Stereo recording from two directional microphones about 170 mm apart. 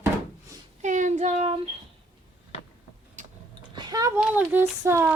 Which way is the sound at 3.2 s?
45° right (ahead or behind).